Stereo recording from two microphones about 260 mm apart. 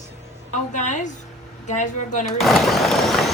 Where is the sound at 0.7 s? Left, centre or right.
Left.